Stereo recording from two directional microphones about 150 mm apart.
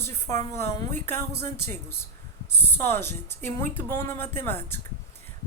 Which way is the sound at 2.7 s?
15° left (ahead or behind).